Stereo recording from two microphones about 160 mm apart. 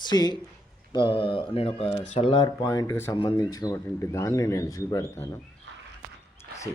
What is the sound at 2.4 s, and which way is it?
Speech, 25° left (ahead or behind).